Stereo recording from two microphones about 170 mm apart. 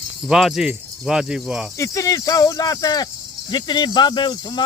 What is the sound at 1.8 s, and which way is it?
Speech, 20° left (ahead or behind).